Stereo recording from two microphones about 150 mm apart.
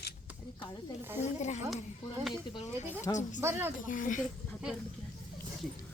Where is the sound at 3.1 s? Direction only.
25° left (ahead or behind).